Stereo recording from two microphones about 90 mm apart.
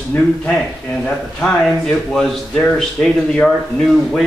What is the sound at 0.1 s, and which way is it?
Speech, 20° left (ahead or behind).